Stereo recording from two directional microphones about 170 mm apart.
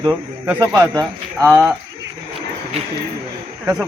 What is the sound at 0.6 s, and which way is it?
Speech, 20° right (ahead or behind).